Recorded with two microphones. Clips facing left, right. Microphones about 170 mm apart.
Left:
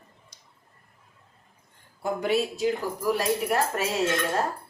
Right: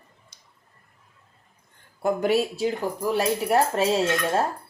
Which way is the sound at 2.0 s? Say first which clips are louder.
Right 4 dB; 45° right (ahead or behind).